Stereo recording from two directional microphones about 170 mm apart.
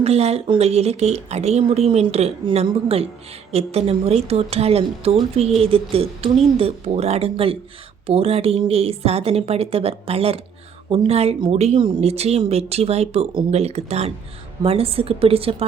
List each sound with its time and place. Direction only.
0.0 s speech: 35° right (ahead or behind)